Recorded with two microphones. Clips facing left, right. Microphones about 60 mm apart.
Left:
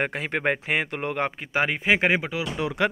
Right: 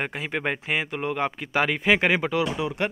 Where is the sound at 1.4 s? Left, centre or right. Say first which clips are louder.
Right 1 dB; left.